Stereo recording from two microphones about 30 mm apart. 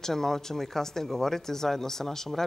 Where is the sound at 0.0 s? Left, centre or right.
Centre.